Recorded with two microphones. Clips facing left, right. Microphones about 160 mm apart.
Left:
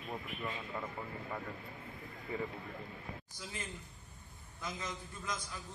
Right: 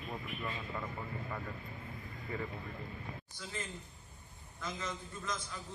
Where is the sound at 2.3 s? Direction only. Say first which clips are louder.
Left 1 dB; 20° left (ahead or behind).